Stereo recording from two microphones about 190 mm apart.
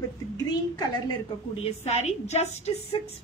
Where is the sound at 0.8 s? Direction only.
20° left (ahead or behind).